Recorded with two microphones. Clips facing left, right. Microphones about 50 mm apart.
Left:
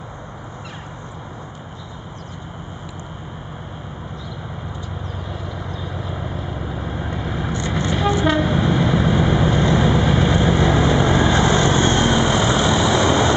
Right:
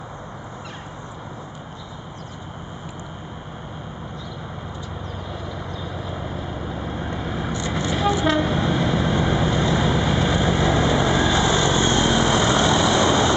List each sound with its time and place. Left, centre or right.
5.8 s vehicle: centre
7.7 s train: centre
11.2 s vehicle: left
11.5 s vehicle: left
11.9 s vehicle: centre